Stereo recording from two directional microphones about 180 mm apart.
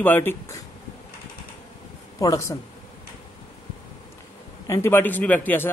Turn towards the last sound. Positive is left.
turn(degrees=10)  # may be behind; listen again after turning